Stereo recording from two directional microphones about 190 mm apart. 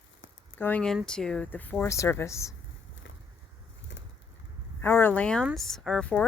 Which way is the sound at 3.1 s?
75° left (ahead or behind).